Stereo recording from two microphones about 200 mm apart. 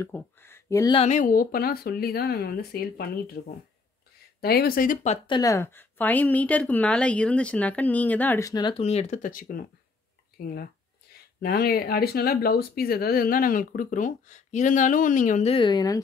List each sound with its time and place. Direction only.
0.0 s speech: 10° left (ahead or behind)
0.9 s speech: 35° left (ahead or behind)
11.1 s a sound: 50° left (ahead or behind)
11.4 s speech: 50° left (ahead or behind)
15.5 s a woman's voice: 25° left (ahead or behind)